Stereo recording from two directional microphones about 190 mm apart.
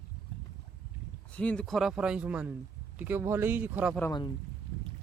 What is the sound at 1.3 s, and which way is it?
Speech, 5° left (ahead or behind).